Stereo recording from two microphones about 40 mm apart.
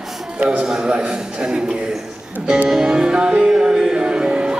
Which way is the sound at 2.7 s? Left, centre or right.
Centre.